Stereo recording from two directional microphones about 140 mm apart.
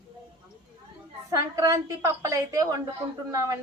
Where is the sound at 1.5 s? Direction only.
25° right (ahead or behind).